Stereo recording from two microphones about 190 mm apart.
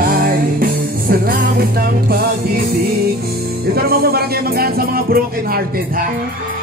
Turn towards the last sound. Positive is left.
turn(degrees=-50)  # may be behind; listen again after turning